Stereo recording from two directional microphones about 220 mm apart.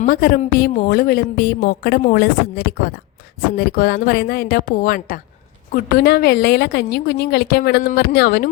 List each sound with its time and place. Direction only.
0.0 s a woman's voice: 40° left (ahead or behind)